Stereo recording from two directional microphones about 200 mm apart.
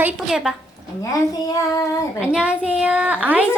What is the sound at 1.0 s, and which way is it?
Speech, 15° left (ahead or behind).